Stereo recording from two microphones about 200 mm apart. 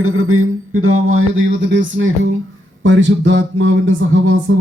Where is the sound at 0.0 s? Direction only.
90° right.